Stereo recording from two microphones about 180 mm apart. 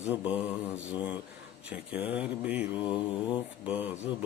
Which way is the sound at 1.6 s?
5° right (ahead or behind).